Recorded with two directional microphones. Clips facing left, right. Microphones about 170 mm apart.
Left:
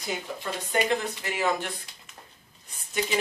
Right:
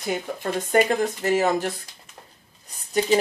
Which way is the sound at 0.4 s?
45° right (ahead or behind).